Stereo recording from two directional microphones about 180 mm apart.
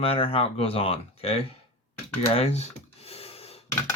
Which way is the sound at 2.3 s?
35° left (ahead or behind).